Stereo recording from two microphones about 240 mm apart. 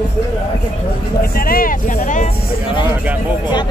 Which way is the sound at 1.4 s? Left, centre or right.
Left.